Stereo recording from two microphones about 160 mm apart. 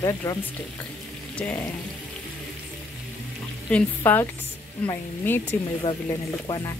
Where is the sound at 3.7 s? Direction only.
10° left (ahead or behind).